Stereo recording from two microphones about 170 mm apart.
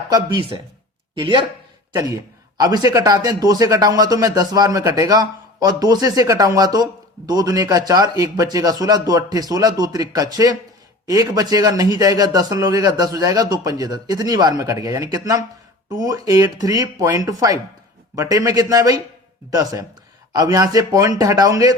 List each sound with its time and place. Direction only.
0.1 s a man's voice: 25° right (ahead or behind)